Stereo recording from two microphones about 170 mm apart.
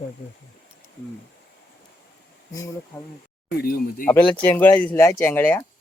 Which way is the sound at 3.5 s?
60° left (ahead or behind).